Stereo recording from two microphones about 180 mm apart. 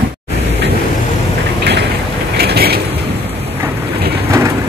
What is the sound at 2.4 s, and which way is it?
Mechanisms, 60° right (ahead or behind).